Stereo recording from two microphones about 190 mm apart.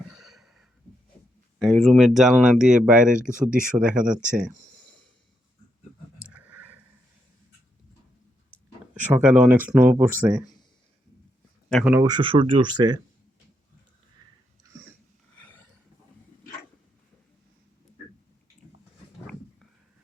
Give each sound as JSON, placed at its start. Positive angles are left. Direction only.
{"t": 0.1, "sound": "a sound", "side_deg": 0}
{"t": 1.5, "sound": "speech", "side_deg": 5}
{"t": 4.3, "sound": "speech", "side_deg": -40}
{"t": 6.2, "sound": "a sound", "side_deg": -10}
{"t": 9.1, "sound": "speech", "side_deg": -5}
{"t": 11.7, "sound": "speech", "side_deg": 0}
{"t": 11.9, "sound": "speech", "side_deg": -20}